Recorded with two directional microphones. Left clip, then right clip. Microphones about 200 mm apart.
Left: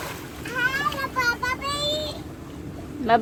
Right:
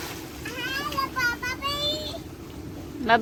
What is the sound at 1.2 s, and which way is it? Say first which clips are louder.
Child singing: left 5 dB; centre (ahead or behind).